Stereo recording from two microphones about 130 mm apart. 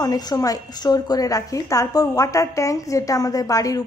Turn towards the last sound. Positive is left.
turn(degrees=25)  # may be behind; listen again after turning